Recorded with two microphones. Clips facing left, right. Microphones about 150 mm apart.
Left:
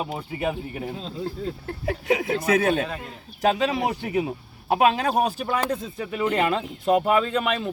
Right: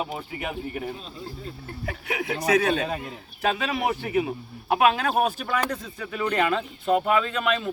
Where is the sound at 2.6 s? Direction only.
50° left (ahead or behind).